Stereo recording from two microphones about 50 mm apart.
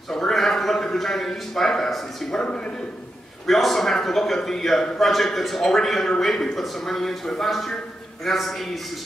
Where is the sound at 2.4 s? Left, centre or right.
Centre.